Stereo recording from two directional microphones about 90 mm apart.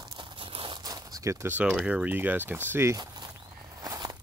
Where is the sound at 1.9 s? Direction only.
15° right (ahead or behind).